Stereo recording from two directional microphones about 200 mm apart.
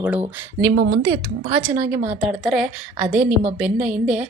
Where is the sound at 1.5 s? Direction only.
10° right (ahead or behind).